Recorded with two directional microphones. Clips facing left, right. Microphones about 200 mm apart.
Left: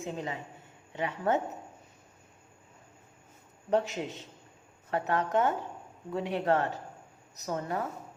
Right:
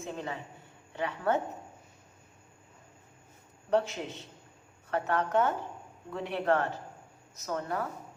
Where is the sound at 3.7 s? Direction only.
15° left (ahead or behind).